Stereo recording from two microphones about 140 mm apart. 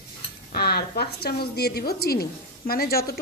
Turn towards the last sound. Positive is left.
turn(degrees=90)